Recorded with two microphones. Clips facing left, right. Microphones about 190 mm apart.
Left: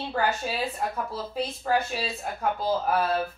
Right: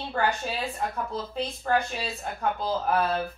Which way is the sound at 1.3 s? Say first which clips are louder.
Left 1 dB; 5° left (ahead or behind).